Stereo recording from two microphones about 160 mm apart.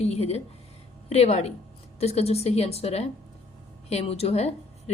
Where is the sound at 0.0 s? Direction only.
40° left (ahead or behind).